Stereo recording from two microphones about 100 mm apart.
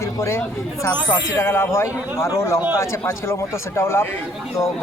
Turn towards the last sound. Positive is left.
turn(degrees=25)  # may be behind; listen again after turning